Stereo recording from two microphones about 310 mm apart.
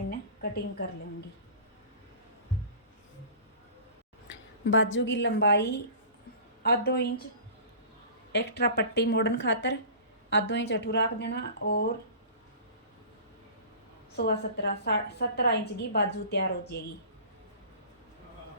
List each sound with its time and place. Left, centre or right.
0.1 s a sound: left
4.6 s a woman's voice: left
8.3 s a woman's voice: left
14.2 s a woman's voice: left